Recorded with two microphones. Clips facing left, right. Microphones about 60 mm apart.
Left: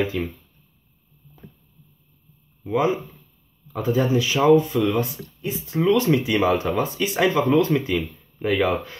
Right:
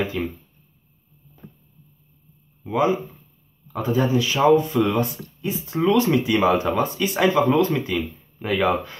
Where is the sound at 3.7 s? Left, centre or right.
Centre.